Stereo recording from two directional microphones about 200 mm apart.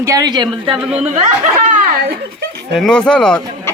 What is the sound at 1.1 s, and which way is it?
Speech, 45° right (ahead or behind).